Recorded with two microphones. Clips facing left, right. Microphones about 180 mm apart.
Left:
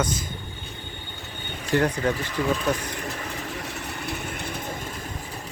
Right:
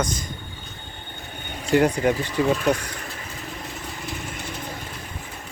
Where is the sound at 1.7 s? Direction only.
10° right (ahead or behind).